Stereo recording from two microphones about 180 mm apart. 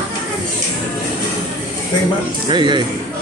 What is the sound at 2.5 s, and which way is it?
Speech, 25° right (ahead or behind).